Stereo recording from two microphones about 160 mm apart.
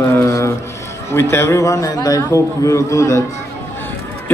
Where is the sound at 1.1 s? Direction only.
15° left (ahead or behind).